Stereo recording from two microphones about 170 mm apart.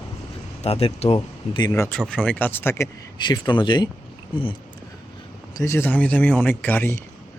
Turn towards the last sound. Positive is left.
turn(degrees=10)  # may be behind; listen again after turning